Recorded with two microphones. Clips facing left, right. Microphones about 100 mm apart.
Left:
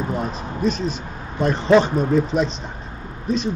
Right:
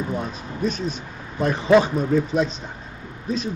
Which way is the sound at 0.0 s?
35° left (ahead or behind).